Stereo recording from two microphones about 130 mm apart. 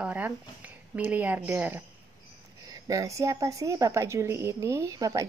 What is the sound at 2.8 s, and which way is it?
A woman's voice, 25° right (ahead or behind).